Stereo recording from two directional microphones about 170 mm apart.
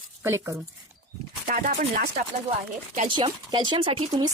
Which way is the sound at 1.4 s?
50° right (ahead or behind).